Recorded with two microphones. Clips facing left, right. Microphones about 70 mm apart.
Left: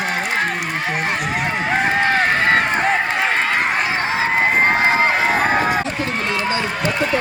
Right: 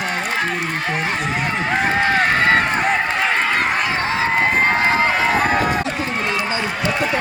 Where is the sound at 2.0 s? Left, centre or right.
Centre.